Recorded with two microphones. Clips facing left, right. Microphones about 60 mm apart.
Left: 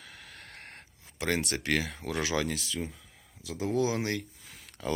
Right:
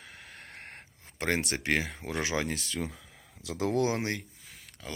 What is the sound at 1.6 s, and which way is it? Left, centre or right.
Speech, right.